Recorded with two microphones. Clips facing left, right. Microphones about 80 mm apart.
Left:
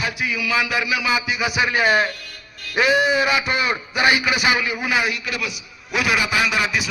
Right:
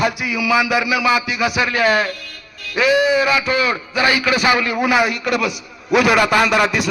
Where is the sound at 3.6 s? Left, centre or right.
Left.